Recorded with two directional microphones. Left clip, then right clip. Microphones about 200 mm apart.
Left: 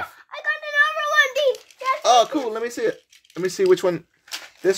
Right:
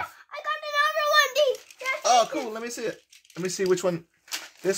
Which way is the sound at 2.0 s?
45° left (ahead or behind).